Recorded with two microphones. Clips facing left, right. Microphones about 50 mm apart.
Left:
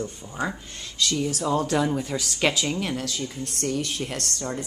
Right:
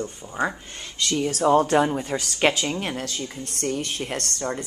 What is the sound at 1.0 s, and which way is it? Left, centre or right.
Speech, right.